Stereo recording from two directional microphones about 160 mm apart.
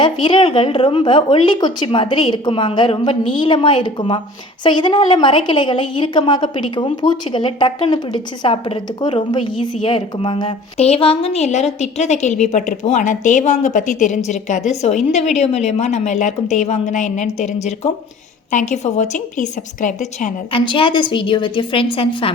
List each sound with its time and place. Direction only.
0.0 s a woman's voice: 30° left (ahead or behind); by 20.3 s 50° left (ahead or behind)
20.5 s a woman's voice: 30° left (ahead or behind)